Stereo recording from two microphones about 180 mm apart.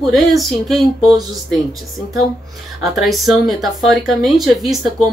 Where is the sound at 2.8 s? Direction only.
Centre (ahead or behind).